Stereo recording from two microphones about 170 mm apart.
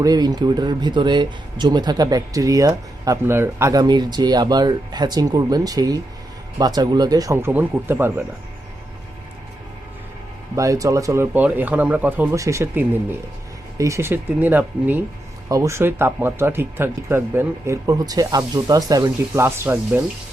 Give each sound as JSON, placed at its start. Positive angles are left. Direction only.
{"t": 0.0, "sound": "speech", "side_deg": -20}
{"t": 10.5, "sound": "speech", "side_deg": -20}